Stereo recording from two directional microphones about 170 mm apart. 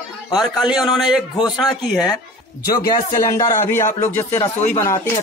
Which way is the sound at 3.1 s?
20° left (ahead or behind).